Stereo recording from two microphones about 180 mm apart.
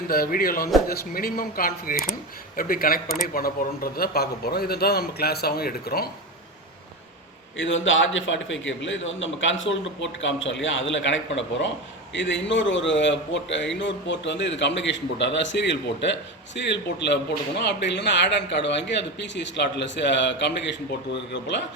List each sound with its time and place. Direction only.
0.1 s a man's voice: 55° left (ahead or behind)
7.5 s a man's voice: 90° left